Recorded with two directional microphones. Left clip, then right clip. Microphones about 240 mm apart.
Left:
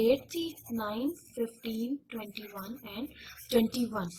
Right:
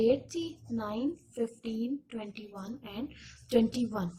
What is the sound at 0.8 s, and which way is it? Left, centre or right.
Speech, left.